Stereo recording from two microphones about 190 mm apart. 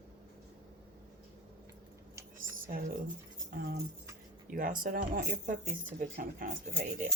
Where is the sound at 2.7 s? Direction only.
45° right (ahead or behind).